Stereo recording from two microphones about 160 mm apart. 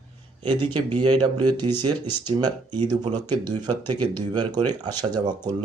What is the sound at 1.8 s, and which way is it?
Speech, 25° right (ahead or behind).